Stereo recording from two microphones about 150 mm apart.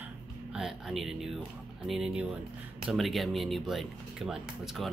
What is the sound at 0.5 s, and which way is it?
Speech, centre (ahead or behind).